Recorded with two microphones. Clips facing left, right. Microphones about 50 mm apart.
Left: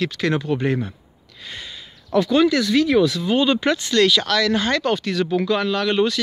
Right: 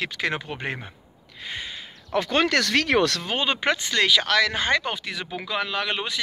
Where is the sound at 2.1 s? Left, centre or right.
Right.